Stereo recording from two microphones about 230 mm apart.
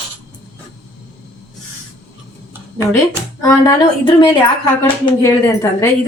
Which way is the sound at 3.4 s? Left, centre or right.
Centre.